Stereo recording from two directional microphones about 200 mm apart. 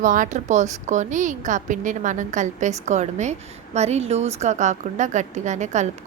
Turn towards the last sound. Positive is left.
turn(degrees=-35)  # may be behind; listen again after turning